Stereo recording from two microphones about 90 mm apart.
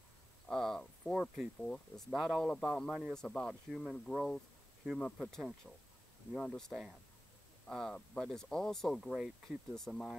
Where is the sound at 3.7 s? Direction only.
Centre (ahead or behind).